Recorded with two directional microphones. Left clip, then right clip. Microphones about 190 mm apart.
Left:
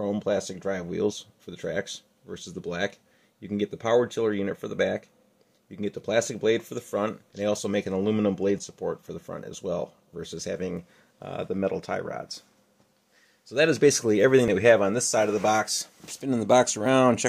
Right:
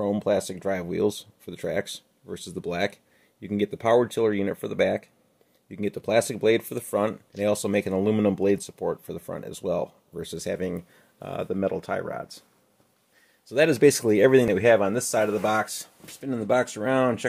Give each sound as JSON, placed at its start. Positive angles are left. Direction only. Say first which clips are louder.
{"t": 0.0, "sound": "speech", "louder": "right 3 dB", "side_deg": -35}
{"t": 13.5, "sound": "speech", "louder": "right 2 dB", "side_deg": -25}
{"t": 14.4, "sound": "speech", "louder": "even", "side_deg": -10}
{"t": 16.2, "sound": "speech", "louder": "left 3 dB", "side_deg": 25}